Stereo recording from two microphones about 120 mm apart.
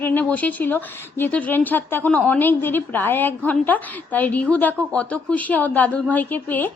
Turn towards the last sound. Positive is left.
turn(degrees=15)  # may be behind; listen again after turning